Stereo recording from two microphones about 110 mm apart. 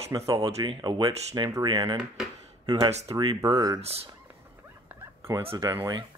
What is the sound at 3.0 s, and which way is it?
Speech, 35° right (ahead or behind).